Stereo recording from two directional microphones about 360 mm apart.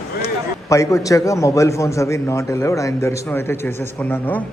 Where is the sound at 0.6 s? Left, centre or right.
Centre.